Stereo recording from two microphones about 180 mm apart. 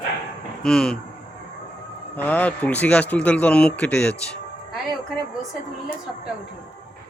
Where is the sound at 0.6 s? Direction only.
5° left (ahead or behind).